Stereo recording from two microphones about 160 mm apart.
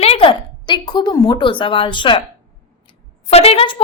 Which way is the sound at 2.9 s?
40° left (ahead or behind).